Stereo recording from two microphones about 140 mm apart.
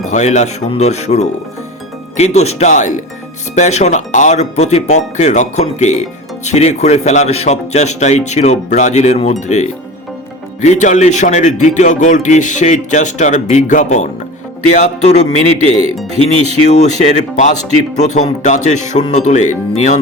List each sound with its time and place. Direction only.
0.1 s speech: 55° left (ahead or behind)
16.6 s speech: 55° left (ahead or behind)